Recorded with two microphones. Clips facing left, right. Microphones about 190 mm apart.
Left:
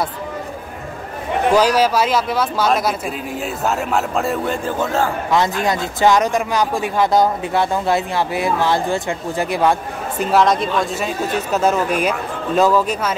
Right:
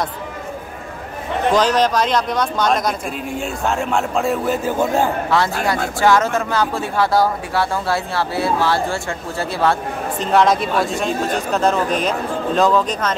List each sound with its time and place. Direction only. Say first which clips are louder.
1.5 s a man's voice: left 1 dB; 10° left (ahead or behind); by 5.1 s 15° right (ahead or behind)
5.3 s speech: left 1 dB; 20° left (ahead or behind)
10.3 s a man's voice: even; centre (ahead or behind)